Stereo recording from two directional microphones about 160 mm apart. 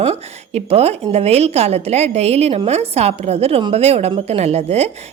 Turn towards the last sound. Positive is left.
turn(degrees=-40)  # may be behind; listen again after turning